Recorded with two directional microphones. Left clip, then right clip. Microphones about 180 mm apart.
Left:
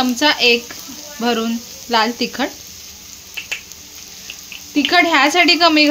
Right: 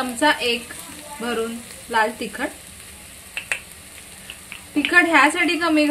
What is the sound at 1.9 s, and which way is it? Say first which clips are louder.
Speech: left 4 dB; 65° left (ahead or behind).